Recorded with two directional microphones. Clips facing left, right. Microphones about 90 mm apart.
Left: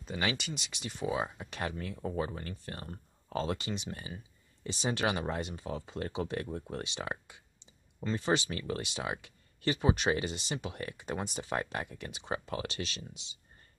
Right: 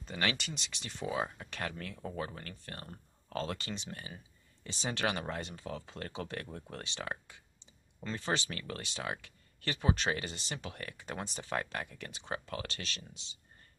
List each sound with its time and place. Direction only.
0.0 s speech: 5° left (ahead or behind)